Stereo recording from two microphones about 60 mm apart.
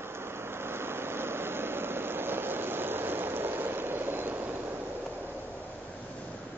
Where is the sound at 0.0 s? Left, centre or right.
Right.